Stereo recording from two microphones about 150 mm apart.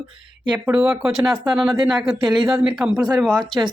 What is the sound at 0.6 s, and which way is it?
Speech, 5° right (ahead or behind).